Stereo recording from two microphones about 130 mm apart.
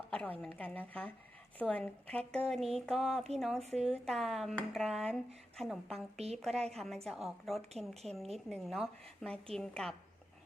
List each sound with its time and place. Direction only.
0.1 s a woman's voice: 10° left (ahead or behind)
3.6 s a woman's voice: 55° right (ahead or behind)
3.8 s a woman's voice: 5° left (ahead or behind)